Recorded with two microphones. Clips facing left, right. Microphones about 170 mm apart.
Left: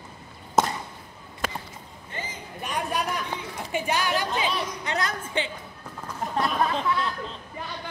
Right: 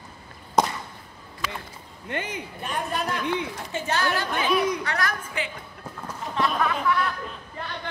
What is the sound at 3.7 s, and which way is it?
A woman's voice, 15° left (ahead or behind).